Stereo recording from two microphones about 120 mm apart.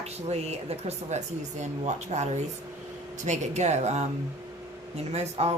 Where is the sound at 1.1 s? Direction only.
75° right (ahead or behind).